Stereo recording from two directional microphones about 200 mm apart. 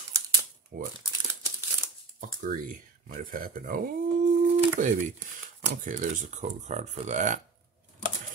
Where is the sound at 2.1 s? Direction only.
40° right (ahead or behind).